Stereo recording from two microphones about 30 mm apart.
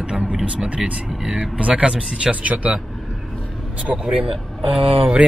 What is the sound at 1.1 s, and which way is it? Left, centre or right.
Speech, centre.